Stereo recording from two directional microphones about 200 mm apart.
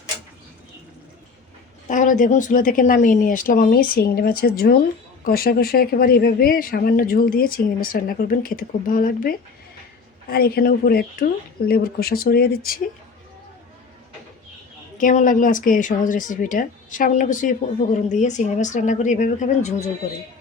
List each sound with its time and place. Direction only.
1.9 s speech: 40° left (ahead or behind)
14.9 s speech: 40° left (ahead or behind)